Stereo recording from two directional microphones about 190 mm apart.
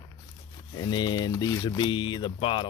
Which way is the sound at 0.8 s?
20° left (ahead or behind).